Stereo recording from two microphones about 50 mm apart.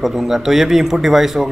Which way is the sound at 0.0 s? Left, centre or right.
Centre.